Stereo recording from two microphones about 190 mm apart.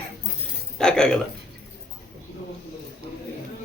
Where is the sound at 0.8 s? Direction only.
5° left (ahead or behind).